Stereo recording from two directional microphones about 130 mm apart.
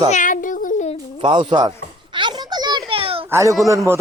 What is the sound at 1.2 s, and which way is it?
Speech, 40° right (ahead or behind).